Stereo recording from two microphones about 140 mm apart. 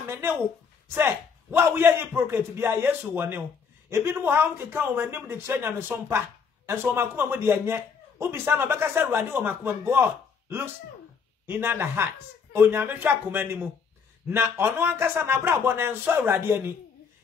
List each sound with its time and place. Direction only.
0.0 s a sound: 20° right (ahead or behind)
0.9 s speech: 15° right (ahead or behind)
11.4 s speech: 15° right (ahead or behind)